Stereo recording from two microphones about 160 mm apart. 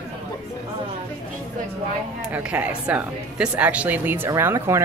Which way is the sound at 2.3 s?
10° right (ahead or behind).